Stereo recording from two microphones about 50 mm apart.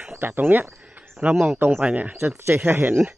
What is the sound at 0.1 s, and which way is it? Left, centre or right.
Speech, right.